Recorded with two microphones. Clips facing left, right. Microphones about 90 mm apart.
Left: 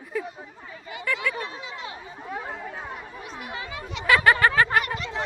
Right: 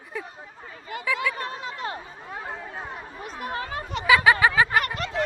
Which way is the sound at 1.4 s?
50° right (ahead or behind).